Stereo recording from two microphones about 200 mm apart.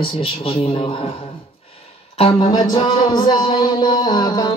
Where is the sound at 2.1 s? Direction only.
25° left (ahead or behind).